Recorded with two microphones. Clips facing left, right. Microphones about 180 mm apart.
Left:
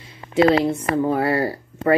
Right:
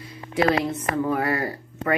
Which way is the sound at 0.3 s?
25° left (ahead or behind).